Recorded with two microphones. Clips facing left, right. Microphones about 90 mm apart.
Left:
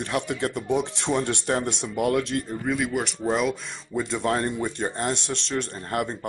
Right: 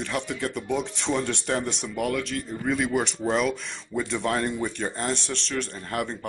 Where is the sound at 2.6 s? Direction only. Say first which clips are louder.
Right 4 dB; 5° left (ahead or behind).